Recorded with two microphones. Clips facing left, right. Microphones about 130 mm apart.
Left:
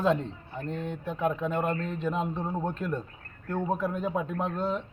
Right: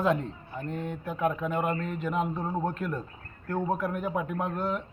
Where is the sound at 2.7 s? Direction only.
25° left (ahead or behind).